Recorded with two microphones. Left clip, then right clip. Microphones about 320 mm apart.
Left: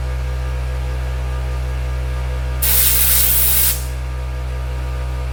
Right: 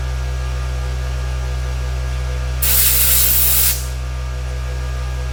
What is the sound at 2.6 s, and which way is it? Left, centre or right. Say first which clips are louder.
Spray: right 1 dB; centre.